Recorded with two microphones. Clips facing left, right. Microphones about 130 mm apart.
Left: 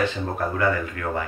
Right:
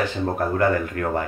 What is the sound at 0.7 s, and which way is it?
Speech, 45° right (ahead or behind).